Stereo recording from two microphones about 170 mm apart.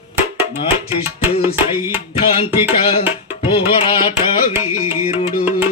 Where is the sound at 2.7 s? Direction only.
30° left (ahead or behind).